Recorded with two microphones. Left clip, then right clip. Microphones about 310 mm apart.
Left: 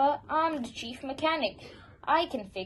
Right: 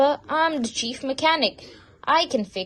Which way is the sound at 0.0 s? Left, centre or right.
Right.